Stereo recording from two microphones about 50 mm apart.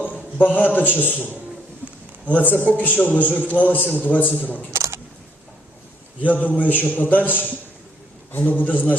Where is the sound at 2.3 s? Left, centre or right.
Left.